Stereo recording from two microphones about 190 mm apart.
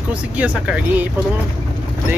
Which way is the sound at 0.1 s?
5° right (ahead or behind).